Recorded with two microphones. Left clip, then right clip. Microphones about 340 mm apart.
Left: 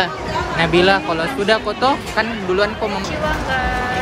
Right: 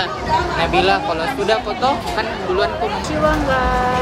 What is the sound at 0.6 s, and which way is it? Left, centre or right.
Speech, centre.